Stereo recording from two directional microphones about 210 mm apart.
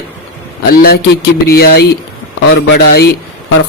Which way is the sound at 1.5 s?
50° left (ahead or behind).